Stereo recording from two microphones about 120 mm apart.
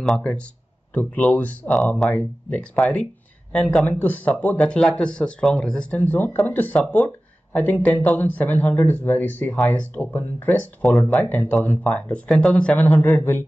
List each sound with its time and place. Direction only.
0.0 s speech: 5° left (ahead or behind)